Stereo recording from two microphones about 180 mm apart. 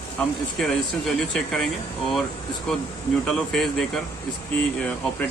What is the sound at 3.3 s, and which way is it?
Speech, centre (ahead or behind).